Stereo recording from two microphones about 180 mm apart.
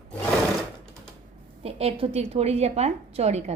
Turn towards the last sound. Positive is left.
turn(degrees=-35)  # may be behind; listen again after turning